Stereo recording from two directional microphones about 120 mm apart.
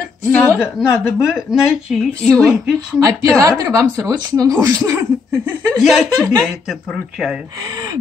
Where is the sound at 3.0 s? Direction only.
25° right (ahead or behind).